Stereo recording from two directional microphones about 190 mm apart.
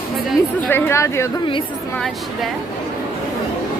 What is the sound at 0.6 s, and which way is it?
Speech, 10° left (ahead or behind).